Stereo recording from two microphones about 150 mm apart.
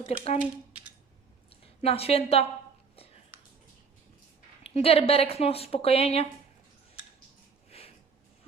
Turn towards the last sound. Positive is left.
turn(degrees=40)  # may be behind; listen again after turning